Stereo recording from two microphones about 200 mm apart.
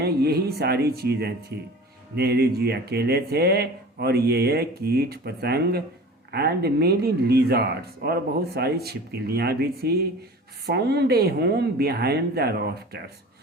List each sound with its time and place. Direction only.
0.0 s speech: 50° right (ahead or behind)